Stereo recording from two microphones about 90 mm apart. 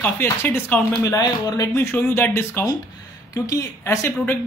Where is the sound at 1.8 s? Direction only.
25° left (ahead or behind).